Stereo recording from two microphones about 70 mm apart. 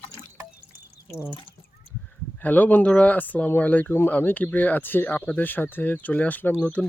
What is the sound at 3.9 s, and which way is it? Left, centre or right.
Speech, left.